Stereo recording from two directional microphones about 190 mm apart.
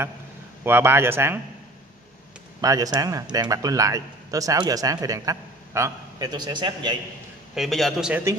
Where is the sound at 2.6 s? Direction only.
20° right (ahead or behind).